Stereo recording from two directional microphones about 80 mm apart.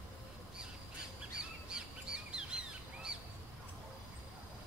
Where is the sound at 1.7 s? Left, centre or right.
Centre.